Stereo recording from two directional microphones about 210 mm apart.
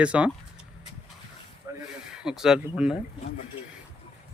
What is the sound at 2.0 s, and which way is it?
Speech, 5° right (ahead or behind).